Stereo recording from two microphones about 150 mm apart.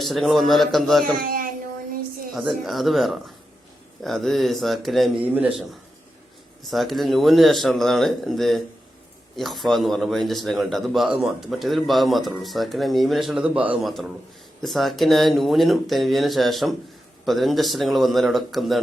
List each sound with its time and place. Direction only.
0.0 s a man's voice: centre (ahead or behind)
1.2 s a sound: 75° right (ahead or behind)
2.3 s a man's voice: centre (ahead or behind)
5.2 s a man's voice: 10° right (ahead or behind)
6.7 s a man's voice: centre (ahead or behind)